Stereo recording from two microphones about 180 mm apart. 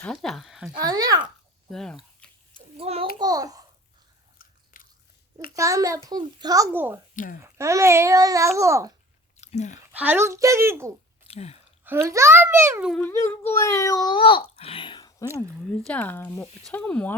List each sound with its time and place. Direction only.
0.0 s a woman's voice: 5° left (ahead or behind)
0.7 s speech: 20° right (ahead or behind)
1.7 s a woman's voice: 5° left (ahead or behind)
2.7 s a sound: 35° right (ahead or behind)
3.2 s a child's voice: 20° right (ahead or behind)
4.4 s biting: 50° left (ahead or behind)
5.5 s a child's voice: 20° right (ahead or behind)
9.4 s speech: 40° left (ahead or behind)
9.9 s a child's voice: 10° right (ahead or behind)
11.3 s speech: 35° left (ahead or behind)
11.9 s a child's voice: 15° right (ahead or behind)
13.0 s speech: 15° left (ahead or behind)
15.8 s speech: 5° left (ahead or behind)